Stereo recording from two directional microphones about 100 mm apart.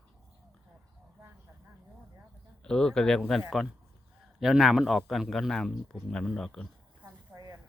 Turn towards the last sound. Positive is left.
turn(degrees=-35)  # may be behind; listen again after turning